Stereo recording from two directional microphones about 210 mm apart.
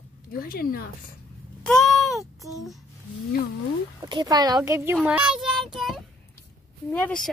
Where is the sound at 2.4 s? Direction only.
Centre (ahead or behind).